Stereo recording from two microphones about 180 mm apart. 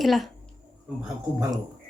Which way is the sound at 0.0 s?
Centre (ahead or behind).